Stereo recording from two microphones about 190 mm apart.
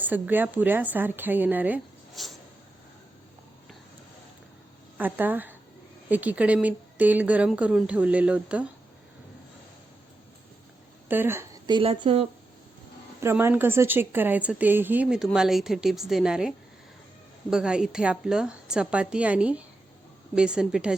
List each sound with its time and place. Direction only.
0.0 s speech: 10° right (ahead or behind)
4.9 s speech: 10° right (ahead or behind)
11.1 s a woman's voice: 10° right (ahead or behind)
11.7 s speech: 25° right (ahead or behind)
13.1 s a woman's voice: 15° right (ahead or behind)